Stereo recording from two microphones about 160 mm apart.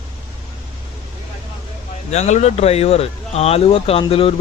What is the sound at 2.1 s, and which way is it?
Speech, 45° left (ahead or behind).